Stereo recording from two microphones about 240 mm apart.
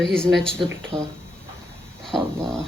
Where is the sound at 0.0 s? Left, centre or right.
Centre.